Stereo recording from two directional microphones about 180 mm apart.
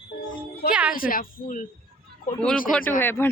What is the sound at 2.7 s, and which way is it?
Speech, 5° left (ahead or behind).